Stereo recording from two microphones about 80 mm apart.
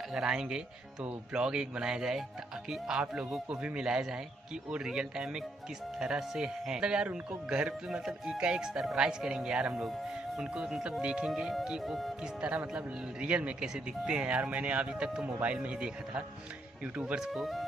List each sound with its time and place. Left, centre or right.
0.1 s speech: centre